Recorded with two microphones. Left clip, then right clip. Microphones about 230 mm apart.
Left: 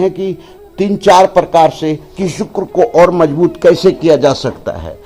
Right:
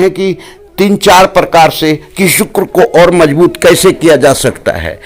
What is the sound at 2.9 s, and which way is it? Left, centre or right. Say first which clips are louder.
Speech: right 2 dB; right.